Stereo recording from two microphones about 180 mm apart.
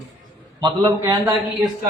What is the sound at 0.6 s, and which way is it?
Speech, 25° right (ahead or behind).